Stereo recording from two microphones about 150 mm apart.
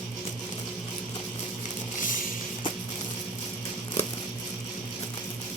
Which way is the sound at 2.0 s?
60° left (ahead or behind).